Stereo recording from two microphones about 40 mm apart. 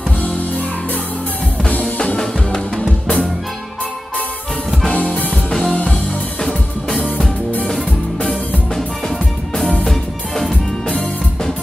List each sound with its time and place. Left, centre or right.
2.8 s music: centre
4.9 s music: left
5.3 s music: centre
5.7 s music: left